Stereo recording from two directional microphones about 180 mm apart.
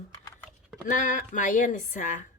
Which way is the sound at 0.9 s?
45° left (ahead or behind).